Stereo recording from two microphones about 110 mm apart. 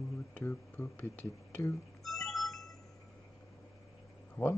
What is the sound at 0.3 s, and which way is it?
Speech, 20° left (ahead or behind).